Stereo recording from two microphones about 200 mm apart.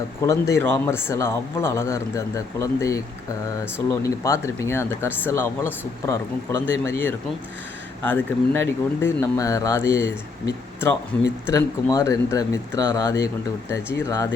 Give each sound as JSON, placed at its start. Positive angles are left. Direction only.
{"t": 0.2, "sound": "speech", "side_deg": 15}
{"t": 6.7, "sound": "speech", "side_deg": -70}
{"t": 8.0, "sound": "speech", "side_deg": 10}